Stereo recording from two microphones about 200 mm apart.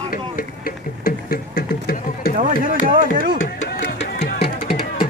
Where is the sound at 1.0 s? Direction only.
50° left (ahead or behind).